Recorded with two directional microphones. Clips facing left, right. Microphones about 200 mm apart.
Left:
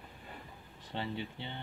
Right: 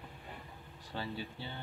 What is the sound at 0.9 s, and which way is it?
Speech, 20° left (ahead or behind).